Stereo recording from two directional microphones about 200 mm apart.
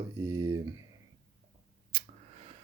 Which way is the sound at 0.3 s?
15° right (ahead or behind).